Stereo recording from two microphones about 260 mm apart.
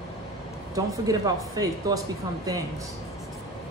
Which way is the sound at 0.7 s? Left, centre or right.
Centre.